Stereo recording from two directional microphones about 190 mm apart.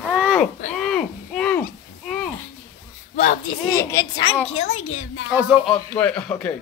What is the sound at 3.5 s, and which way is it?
Speech, 15° left (ahead or behind).